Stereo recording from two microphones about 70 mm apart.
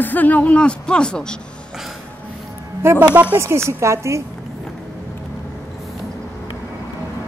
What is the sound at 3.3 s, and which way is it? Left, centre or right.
Speech, right.